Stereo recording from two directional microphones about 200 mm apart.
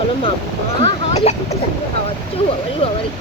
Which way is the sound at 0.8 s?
35° left (ahead or behind).